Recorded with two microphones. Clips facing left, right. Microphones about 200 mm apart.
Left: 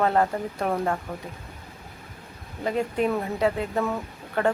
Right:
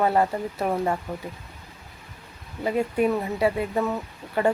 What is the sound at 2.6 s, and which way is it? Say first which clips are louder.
Speech: right 2 dB; 5° right (ahead or behind).